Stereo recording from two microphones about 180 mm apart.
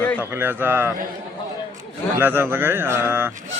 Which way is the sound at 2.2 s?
10° right (ahead or behind).